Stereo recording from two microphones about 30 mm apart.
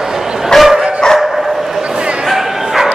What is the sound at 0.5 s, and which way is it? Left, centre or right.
Dog, centre.